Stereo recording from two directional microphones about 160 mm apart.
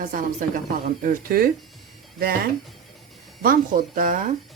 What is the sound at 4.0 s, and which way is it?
Speech, 55° right (ahead or behind).